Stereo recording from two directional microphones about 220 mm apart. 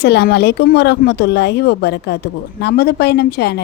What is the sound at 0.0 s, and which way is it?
A woman's voice, 45° left (ahead or behind).